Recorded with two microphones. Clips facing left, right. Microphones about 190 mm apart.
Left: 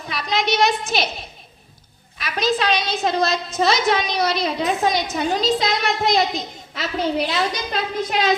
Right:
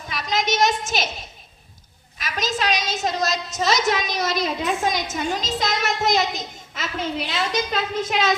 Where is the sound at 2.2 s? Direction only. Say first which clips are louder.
Left 4 dB; 45° right (ahead or behind).